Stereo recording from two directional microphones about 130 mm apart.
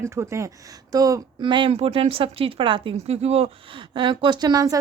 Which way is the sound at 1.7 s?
50° right (ahead or behind).